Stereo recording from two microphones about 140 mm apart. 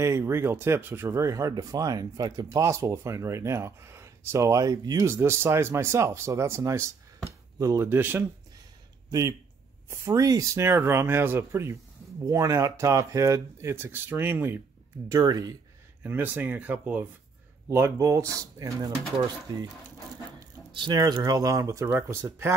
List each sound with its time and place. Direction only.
0.0 s speech: 20° right (ahead or behind)
9.8 s speech: 20° right (ahead or behind)
15.0 s speech: 25° right (ahead or behind)
16.0 s speech: 15° right (ahead or behind)
21.8 s speech: 15° right (ahead or behind)